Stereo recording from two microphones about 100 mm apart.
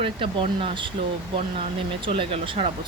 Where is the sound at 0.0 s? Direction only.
60° right (ahead or behind).